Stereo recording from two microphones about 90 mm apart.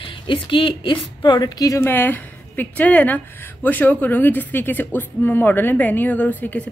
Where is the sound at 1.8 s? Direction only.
25° left (ahead or behind).